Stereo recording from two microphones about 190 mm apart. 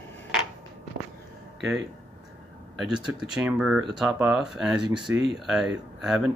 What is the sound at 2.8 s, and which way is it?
Speech, 5° right (ahead or behind).